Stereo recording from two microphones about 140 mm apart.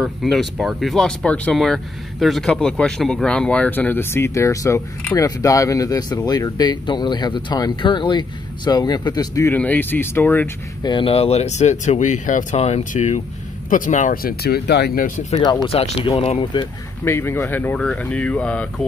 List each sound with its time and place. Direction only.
0.0 s speech: centre (ahead or behind); by 9.5 s 25° left (ahead or behind)
9.5 s speech: 10° left (ahead or behind)
10.8 s speech: 35° left (ahead or behind); by 13.2 s 55° left (ahead or behind)
13.7 s speech: 70° left (ahead or behind)
15.4 s speech: 30° left (ahead or behind)
15.7 s speech: 45° left (ahead or behind)
17.0 s speech: 15° left (ahead or behind)